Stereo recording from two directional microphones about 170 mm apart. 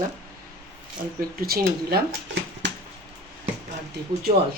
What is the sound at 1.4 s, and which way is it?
Speech, 65° right (ahead or behind).